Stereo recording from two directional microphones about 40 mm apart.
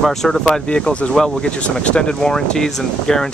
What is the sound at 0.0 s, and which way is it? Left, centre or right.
Speech, centre.